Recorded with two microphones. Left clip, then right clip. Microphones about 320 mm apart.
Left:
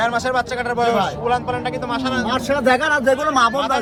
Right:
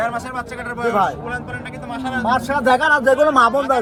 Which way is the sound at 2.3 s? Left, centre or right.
Centre.